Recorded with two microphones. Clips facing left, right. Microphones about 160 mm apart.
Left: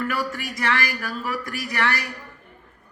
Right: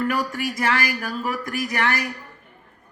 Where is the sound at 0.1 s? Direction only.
15° right (ahead or behind).